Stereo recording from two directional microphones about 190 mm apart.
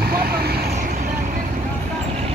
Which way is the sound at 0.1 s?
55° right (ahead or behind).